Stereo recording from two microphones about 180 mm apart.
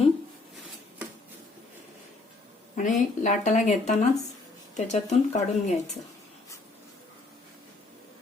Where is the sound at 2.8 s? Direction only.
45° left (ahead or behind).